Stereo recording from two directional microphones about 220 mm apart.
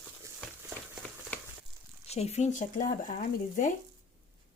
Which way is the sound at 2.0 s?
30° left (ahead or behind).